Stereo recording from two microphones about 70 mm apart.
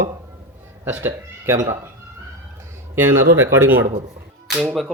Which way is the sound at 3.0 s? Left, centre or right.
Right.